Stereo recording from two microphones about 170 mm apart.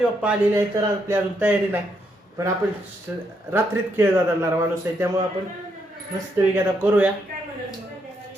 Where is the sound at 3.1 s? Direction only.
10° right (ahead or behind).